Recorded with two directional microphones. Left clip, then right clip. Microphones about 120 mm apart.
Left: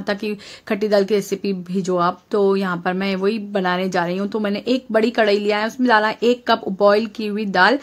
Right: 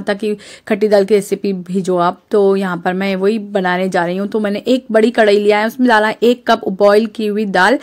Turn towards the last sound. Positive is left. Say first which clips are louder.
# right 4 dB
turn(degrees=-45)  # may be behind; listen again after turning